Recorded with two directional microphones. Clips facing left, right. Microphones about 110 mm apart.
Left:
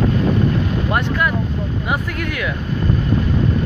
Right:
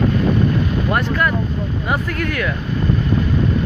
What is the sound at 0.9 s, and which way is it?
Speech, 10° left (ahead or behind).